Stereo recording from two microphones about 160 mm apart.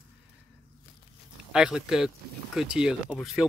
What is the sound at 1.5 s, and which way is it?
Speech, 5° right (ahead or behind).